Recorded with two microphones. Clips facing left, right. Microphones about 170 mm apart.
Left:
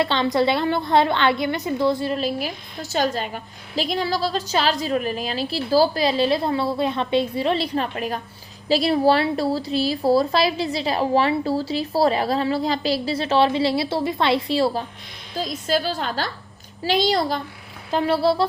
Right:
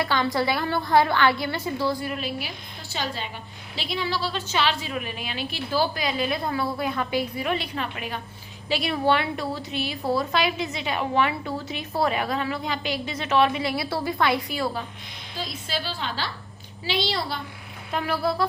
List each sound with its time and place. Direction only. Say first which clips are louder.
0.0 s a woman's voice: left 4 dB; 25° left (ahead or behind)
15.4 s a woman's voice: left 9 dB; 45° left (ahead or behind)
17.9 s a woman's voice: left 6 dB; 30° left (ahead or behind)